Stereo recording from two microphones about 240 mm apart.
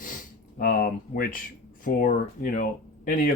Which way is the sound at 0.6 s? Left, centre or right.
Left.